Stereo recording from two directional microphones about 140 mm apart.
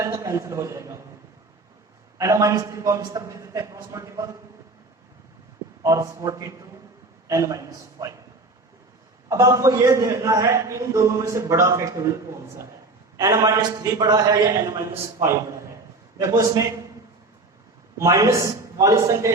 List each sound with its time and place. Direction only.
0.0 s a man's voice: 20° right (ahead or behind)
2.1 s a man's voice: 25° right (ahead or behind)
5.8 s a man's voice: 20° right (ahead or behind)
9.3 s a man's voice: 25° right (ahead or behind)
17.9 s a man's voice: 20° right (ahead or behind)